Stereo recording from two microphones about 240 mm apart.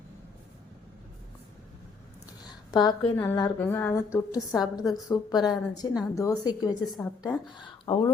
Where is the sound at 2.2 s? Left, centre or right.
Centre.